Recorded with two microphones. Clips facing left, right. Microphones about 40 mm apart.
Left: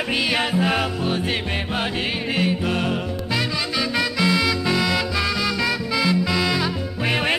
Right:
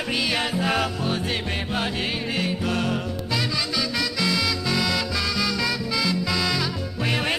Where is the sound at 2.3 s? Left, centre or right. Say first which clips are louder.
Left 5 dB; left.